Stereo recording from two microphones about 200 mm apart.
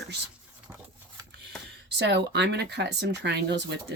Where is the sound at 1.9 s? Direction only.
60° right (ahead or behind).